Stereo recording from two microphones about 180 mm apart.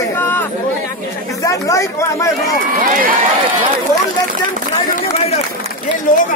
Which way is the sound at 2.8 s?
50° right (ahead or behind).